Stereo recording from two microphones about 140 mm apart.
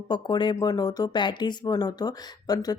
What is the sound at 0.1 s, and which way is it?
Speech, 30° left (ahead or behind).